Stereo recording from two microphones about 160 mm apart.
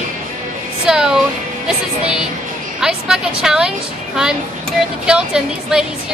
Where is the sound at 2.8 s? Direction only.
5° right (ahead or behind).